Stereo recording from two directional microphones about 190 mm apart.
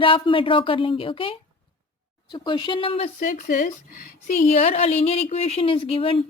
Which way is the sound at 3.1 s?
45° left (ahead or behind).